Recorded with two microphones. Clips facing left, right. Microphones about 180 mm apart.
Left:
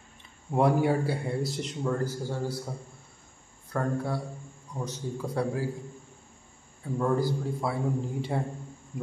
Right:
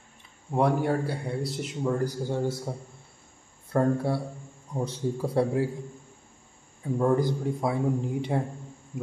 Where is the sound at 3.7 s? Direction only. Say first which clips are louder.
Right 5 dB; 25° right (ahead or behind).